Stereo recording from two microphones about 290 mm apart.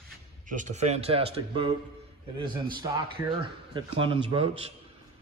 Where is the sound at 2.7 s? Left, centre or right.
Centre.